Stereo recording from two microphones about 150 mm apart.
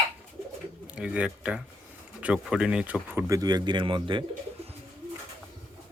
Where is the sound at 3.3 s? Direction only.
25° right (ahead or behind).